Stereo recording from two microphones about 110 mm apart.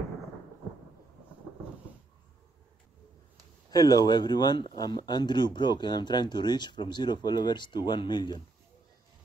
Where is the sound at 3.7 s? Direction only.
35° left (ahead or behind).